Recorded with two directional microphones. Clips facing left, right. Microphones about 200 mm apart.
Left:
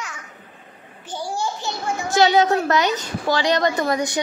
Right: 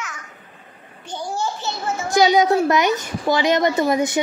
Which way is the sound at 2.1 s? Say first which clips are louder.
Right 1 dB; 15° right (ahead or behind).